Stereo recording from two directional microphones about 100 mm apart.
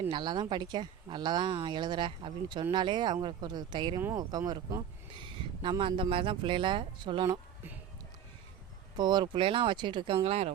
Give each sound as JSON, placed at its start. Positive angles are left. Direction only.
{"t": 0.1, "sound": "speech", "side_deg": -50}
{"t": 5.6, "sound": "speech", "side_deg": -55}
{"t": 9.0, "sound": "speech", "side_deg": -45}
{"t": 10.2, "sound": "speech", "side_deg": -90}